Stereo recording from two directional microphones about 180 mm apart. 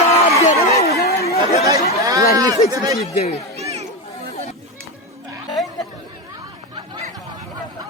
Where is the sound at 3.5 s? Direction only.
35° right (ahead or behind).